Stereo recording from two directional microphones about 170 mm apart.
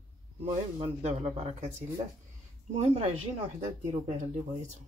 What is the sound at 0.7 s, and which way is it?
Speech, 40° right (ahead or behind).